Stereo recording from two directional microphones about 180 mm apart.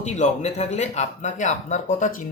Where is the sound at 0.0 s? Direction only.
40° left (ahead or behind).